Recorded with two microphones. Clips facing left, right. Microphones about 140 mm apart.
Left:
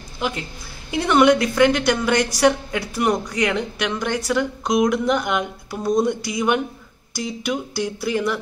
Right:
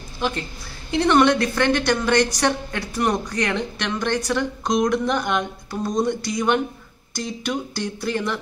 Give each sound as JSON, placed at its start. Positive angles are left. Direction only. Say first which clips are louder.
{"t": 0.9, "sound": "speech", "louder": "left 1 dB", "side_deg": 10}